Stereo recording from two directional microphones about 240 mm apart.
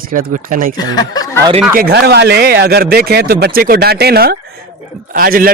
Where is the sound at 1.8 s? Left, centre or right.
Right.